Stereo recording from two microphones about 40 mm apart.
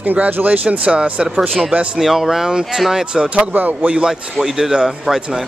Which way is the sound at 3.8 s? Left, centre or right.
Right.